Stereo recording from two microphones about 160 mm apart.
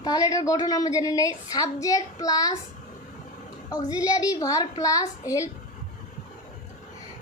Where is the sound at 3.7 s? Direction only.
25° left (ahead or behind).